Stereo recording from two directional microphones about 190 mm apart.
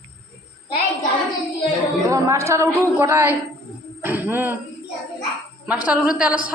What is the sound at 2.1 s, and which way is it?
A woman's voice, 15° right (ahead or behind).